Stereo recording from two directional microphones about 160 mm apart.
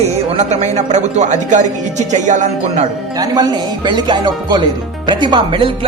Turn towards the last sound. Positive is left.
turn(degrees=-30)  # may be behind; listen again after turning